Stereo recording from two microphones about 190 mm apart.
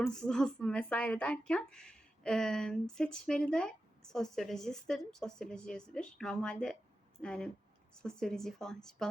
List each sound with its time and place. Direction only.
0.0 s speech: 5° left (ahead or behind)